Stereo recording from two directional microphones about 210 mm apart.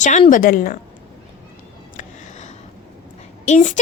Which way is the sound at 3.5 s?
35° left (ahead or behind).